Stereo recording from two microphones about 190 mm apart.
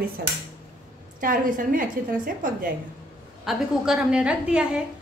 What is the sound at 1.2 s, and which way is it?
A woman's voice, 45° right (ahead or behind).